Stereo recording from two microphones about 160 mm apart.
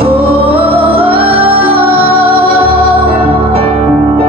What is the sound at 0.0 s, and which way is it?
Music, 35° right (ahead or behind).